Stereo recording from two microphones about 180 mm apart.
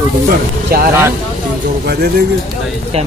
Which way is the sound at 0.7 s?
55° right (ahead or behind).